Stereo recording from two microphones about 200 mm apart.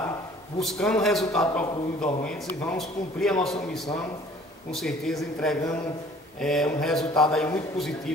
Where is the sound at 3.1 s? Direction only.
5° left (ahead or behind).